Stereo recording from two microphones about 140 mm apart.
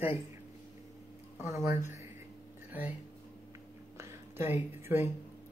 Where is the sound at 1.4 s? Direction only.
20° right (ahead or behind).